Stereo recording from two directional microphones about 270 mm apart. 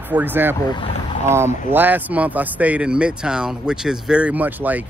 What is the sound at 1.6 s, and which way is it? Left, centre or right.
Speech, centre.